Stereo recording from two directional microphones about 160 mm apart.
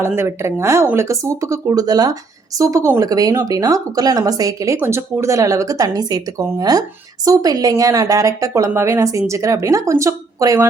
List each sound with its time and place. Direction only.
0.0 s speech: 15° right (ahead or behind)